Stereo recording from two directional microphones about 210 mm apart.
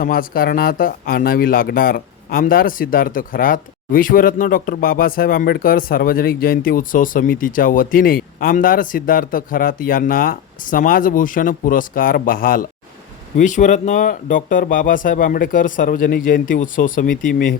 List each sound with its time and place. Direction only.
0.0 s a man's voice: 45° left (ahead or behind)